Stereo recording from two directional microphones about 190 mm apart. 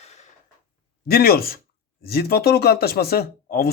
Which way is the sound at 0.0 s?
35° left (ahead or behind).